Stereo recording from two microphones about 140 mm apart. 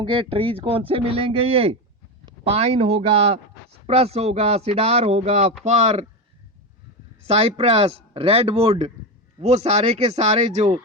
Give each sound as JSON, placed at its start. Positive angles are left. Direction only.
{"t": 0.0, "sound": "a man's voice", "side_deg": -40}
{"t": 7.3, "sound": "speech", "side_deg": -45}